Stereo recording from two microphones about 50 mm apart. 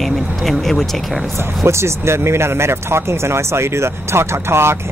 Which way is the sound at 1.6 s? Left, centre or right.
Right.